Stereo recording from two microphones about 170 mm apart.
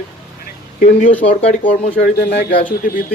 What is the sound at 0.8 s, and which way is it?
Speech, 55° left (ahead or behind).